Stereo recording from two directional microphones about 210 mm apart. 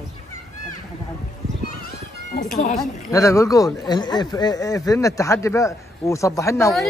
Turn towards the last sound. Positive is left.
turn(degrees=15)  # may be behind; listen again after turning